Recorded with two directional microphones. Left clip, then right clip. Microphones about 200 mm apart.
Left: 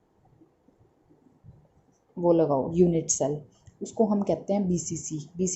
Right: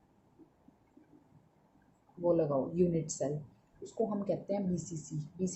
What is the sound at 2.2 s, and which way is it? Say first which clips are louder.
A woman's voice: left 8 dB; 40° left (ahead or behind).